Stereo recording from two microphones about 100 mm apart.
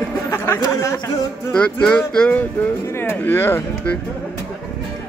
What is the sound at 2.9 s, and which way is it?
Speech, 20° left (ahead or behind).